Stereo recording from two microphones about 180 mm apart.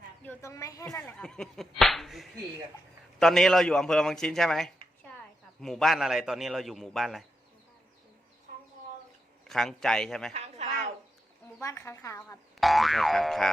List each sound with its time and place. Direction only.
0.3 s a woman's voice: 15° left (ahead or behind)
0.9 s a man's voice: 5° left (ahead or behind)
9.5 s a man's voice: centre (ahead or behind)
10.3 s a sound: 40° right (ahead or behind)
11.6 s a woman's voice: 15° left (ahead or behind)
12.5 s a man's voice: centre (ahead or behind)